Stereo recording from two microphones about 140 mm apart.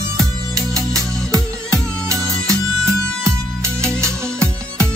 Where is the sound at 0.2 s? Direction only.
25° right (ahead or behind).